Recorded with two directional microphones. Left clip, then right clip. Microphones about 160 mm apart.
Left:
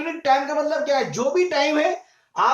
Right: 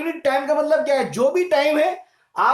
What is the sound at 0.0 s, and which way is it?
Speech, 55° right (ahead or behind).